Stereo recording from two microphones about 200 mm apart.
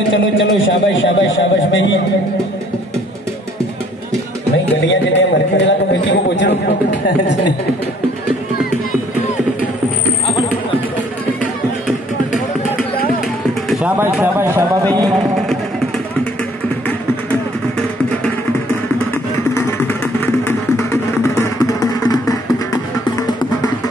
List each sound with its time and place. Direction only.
0.1 s a man's voice: 70° left (ahead or behind)
4.8 s a man's voice: 65° left (ahead or behind)
10.2 s music: 25° left (ahead or behind)
13.7 s speech: 5° right (ahead or behind)
16.8 s vehicle: 5° left (ahead or behind)
19.5 s music: 10° left (ahead or behind)